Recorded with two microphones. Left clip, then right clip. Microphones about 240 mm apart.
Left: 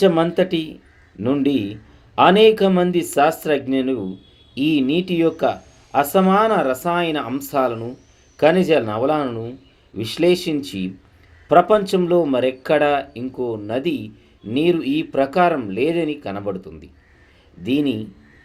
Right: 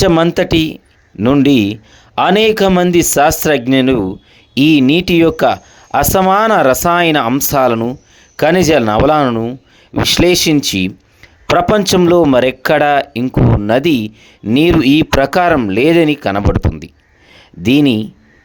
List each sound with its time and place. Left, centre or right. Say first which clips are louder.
0.0 s speech: right 5 dB; right